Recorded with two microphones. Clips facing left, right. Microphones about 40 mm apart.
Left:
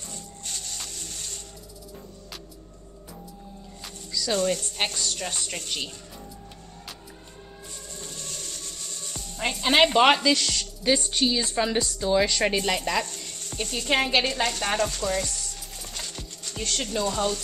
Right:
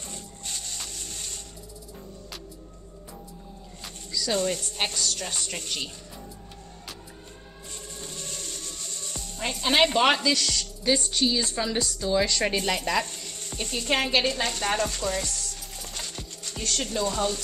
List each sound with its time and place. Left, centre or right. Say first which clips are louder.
0.5 s music: even; centre
3.8 s a woman's voice: even; centre
8.0 s music: right 1 dB; centre
9.4 s a woman's voice: left 2 dB; centre
13.4 s music: left 1 dB; centre
13.8 s a woman's voice: left 1 dB; centre
14.5 s music: left 1 dB; centre
15.2 s a sound: even; centre
15.9 s music: even; centre
16.6 s music: even; centre